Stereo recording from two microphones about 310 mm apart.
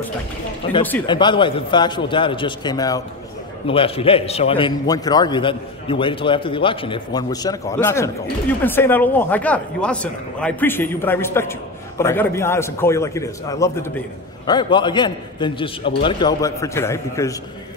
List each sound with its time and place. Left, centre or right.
0.8 s a man's voice: centre